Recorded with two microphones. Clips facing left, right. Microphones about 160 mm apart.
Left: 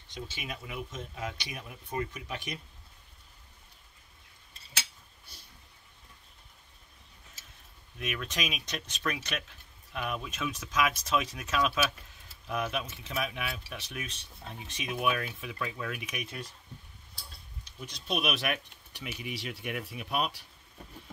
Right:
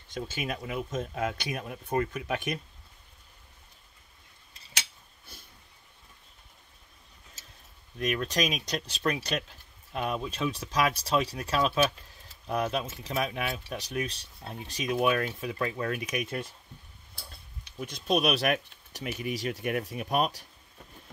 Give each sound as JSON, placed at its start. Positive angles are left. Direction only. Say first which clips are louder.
{"t": 0.1, "sound": "speech", "louder": "right 7 dB", "side_deg": -50}
{"t": 8.0, "sound": "speech", "louder": "right 7 dB", "side_deg": -40}
{"t": 17.6, "sound": "speech", "louder": "right 7 dB", "side_deg": -55}